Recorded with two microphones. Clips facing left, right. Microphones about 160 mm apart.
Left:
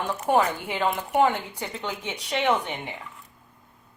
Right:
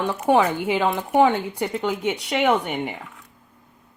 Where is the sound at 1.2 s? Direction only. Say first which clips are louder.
Right 5 dB; 70° right (ahead or behind).